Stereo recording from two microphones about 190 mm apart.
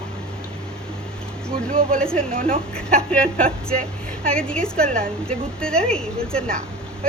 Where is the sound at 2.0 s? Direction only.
5° left (ahead or behind).